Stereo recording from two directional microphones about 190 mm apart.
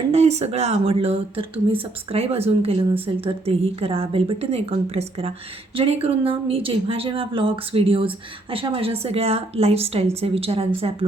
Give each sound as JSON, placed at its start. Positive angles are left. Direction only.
{"t": 0.1, "sound": "a woman's voice", "side_deg": -35}